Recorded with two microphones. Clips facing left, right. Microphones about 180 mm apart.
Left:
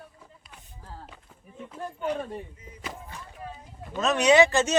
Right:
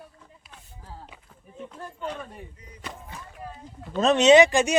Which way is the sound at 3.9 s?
30° right (ahead or behind).